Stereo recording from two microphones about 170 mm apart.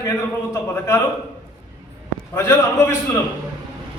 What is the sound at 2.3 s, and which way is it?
Speech, 15° left (ahead or behind).